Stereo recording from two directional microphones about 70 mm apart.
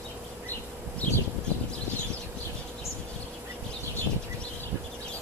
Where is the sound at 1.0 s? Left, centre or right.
Left.